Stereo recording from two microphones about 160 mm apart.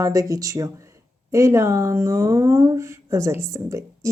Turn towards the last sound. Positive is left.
turn(degrees=-20)  # may be behind; listen again after turning